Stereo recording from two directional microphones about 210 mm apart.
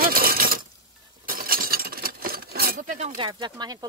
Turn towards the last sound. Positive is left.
turn(degrees=-20)  # may be behind; listen again after turning